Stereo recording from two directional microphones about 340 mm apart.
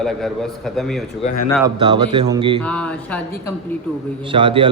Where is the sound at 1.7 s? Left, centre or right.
Centre.